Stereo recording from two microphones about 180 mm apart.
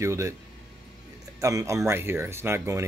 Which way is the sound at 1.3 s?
15° right (ahead or behind).